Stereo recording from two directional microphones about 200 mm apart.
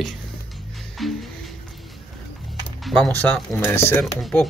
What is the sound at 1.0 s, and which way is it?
Music, centre (ahead or behind).